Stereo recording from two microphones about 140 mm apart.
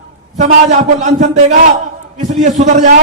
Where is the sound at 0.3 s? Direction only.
55° right (ahead or behind).